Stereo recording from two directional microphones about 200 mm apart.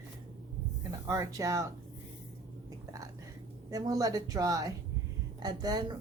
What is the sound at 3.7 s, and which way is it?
Speech, 15° right (ahead or behind).